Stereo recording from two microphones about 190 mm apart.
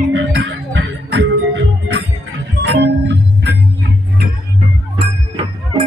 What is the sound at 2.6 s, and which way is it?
Music, 60° right (ahead or behind).